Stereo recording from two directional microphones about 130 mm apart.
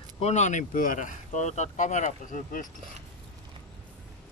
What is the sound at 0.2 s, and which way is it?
Speech, 60° left (ahead or behind).